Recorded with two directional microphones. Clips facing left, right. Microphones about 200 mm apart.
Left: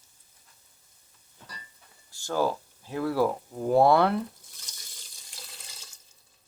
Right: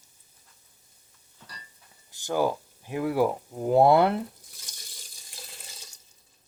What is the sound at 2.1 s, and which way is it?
Speech, 15° right (ahead or behind).